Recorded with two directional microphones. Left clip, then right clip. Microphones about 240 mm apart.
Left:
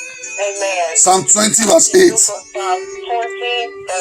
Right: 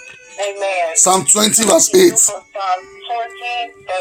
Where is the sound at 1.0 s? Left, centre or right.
Right.